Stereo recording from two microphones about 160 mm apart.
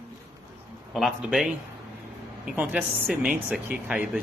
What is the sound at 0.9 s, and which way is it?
A man's voice, centre (ahead or behind).